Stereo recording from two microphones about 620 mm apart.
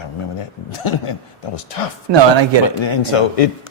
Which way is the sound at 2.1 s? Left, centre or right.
Right.